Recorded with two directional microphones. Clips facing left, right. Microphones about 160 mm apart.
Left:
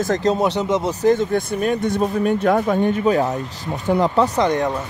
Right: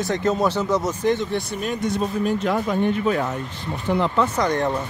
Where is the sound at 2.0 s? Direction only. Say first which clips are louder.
Left 4 dB; 55° left (ahead or behind); by 4.4 s 35° left (ahead or behind).